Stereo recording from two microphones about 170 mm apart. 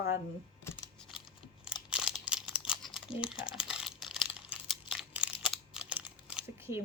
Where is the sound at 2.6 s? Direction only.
Centre (ahead or behind).